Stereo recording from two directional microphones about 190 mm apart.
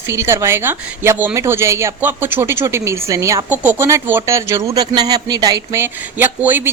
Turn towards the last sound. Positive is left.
turn(degrees=-10)  # may be behind; listen again after turning